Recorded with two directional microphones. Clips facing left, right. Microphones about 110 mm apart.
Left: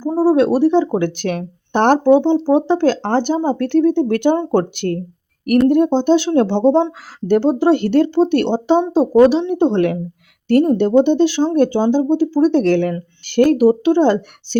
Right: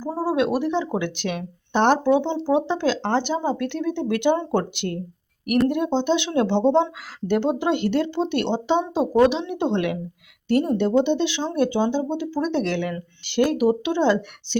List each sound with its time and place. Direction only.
0.0 s speech: 25° left (ahead or behind); by 14.6 s 45° left (ahead or behind)